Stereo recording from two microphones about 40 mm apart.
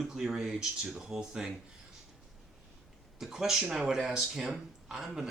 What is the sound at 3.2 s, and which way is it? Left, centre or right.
Speech, centre.